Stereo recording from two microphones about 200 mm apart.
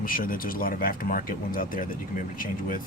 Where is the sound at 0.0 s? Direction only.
45° left (ahead or behind).